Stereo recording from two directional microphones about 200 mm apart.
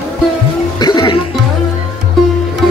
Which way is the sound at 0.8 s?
20° left (ahead or behind).